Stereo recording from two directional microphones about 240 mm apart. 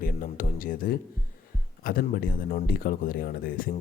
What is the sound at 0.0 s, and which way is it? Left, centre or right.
Speech, left.